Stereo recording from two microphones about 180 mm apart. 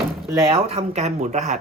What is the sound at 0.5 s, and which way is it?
Speech, 35° right (ahead or behind).